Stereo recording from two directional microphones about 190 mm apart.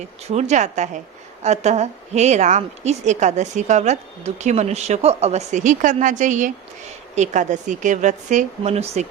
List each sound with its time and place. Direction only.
0.3 s a woman's voice: 35° right (ahead or behind)